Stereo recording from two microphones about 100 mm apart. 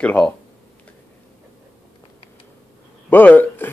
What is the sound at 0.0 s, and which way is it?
Speech, 15° left (ahead or behind).